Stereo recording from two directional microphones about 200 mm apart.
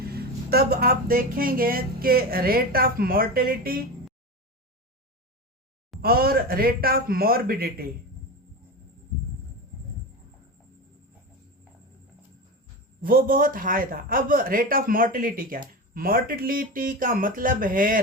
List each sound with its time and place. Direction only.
0.0 s speech: 50° right (ahead or behind)
6.0 s speech: 50° right (ahead or behind)
13.0 s speech: 45° right (ahead or behind)